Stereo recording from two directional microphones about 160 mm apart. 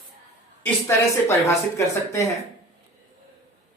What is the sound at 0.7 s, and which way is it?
Speech, 15° left (ahead or behind).